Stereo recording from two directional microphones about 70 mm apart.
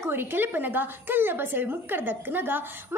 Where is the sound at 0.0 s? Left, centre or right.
Right.